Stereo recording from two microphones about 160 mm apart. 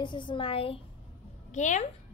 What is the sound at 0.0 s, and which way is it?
Speech, 30° left (ahead or behind).